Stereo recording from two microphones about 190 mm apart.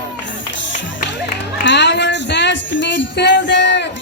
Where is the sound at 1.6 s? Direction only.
65° left (ahead or behind).